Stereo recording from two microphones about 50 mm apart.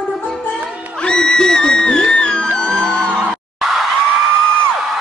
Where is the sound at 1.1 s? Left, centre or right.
Centre.